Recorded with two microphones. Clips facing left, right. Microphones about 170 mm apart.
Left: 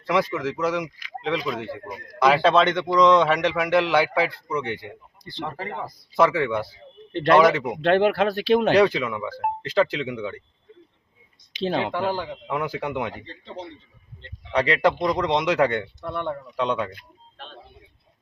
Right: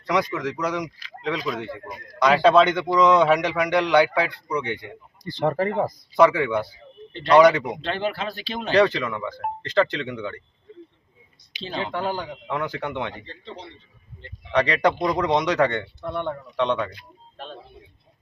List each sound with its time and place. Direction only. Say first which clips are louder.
0.1 s a man's voice: left 1 dB; 5° left (ahead or behind)
5.2 s speech: right 10 dB; 45° right (ahead or behind)
6.1 s a man's voice: right 2 dB; centre (ahead or behind)
7.8 s speech: left 8 dB; 65° left (ahead or behind)
8.7 s speech: left 1 dB; 10° left (ahead or behind)
11.6 s speech: left 6 dB; 60° left (ahead or behind)
12.0 s speech: left 2 dB; 5° left (ahead or behind)
14.5 s a man's voice: even; 5° left (ahead or behind)